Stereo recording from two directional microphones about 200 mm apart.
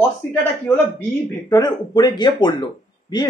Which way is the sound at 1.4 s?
20° left (ahead or behind).